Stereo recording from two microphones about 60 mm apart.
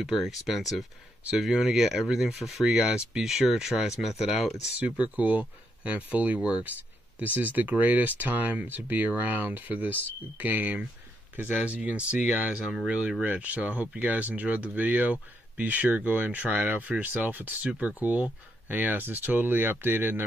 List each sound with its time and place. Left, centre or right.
0.0 s speech: centre
4.7 s speech: right